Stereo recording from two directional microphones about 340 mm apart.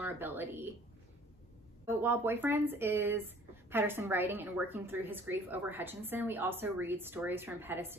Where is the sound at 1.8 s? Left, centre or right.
Centre.